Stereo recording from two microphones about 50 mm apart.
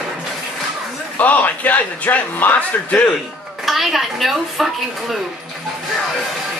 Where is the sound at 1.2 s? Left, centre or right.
Left.